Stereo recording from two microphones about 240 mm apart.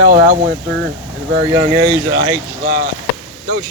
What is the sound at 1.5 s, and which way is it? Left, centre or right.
Speech, centre.